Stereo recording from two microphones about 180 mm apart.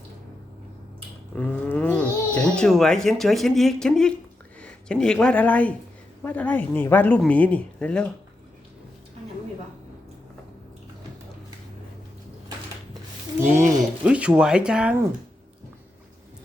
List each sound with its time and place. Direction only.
1.4 s speech: 10° left (ahead or behind)
13.4 s speech: 45° right (ahead or behind)
14.0 s speech: 5° right (ahead or behind)